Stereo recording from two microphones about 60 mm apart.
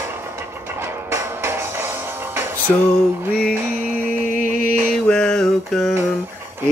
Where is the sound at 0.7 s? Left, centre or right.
Right.